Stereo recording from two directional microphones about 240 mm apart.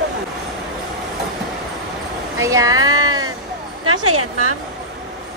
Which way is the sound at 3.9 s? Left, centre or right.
Right.